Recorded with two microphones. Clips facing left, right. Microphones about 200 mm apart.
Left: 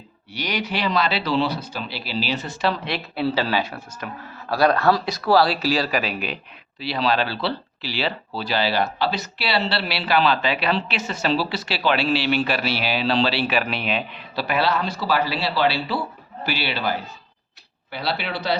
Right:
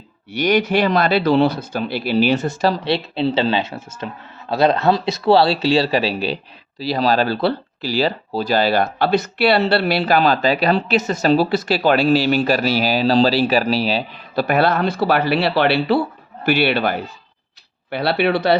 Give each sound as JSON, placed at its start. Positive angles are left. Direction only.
{"t": 0.3, "sound": "speech", "side_deg": -50}
{"t": 14.3, "sound": "speech", "side_deg": -50}